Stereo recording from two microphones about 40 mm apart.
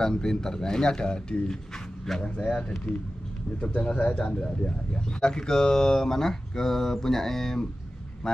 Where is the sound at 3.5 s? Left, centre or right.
Left.